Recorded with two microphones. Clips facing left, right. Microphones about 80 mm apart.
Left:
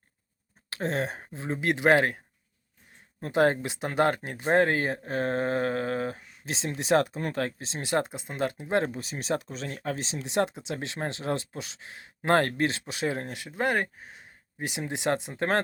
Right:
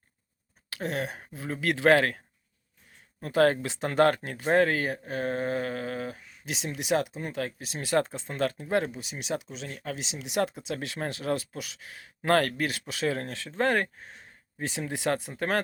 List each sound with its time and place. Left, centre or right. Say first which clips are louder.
0.7 s speech: left 2 dB; left
6.9 s speech: left 4 dB; left
7.6 s speech: right 6 dB; left
8.8 s speech: left 3 dB; left